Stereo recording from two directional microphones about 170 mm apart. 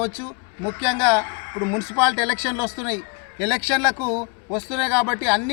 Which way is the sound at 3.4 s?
20° right (ahead or behind).